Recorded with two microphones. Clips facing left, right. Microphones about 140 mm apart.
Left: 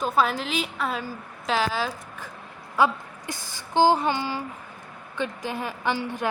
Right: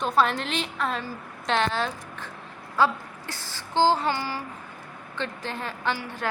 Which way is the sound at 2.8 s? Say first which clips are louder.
Left 1 dB; 15° left (ahead or behind).